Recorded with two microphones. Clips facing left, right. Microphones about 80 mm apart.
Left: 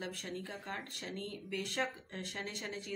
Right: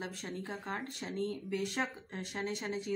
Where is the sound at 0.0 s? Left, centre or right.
Right.